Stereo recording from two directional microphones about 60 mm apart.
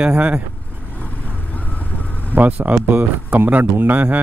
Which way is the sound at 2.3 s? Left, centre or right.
Right.